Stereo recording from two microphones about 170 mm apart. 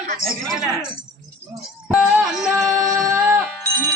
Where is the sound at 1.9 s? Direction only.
5° right (ahead or behind).